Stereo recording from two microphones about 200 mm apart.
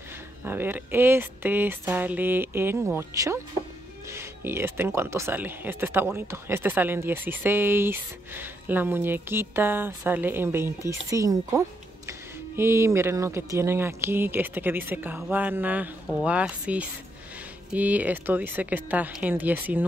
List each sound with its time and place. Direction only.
0.4 s speech: 10° right (ahead or behind)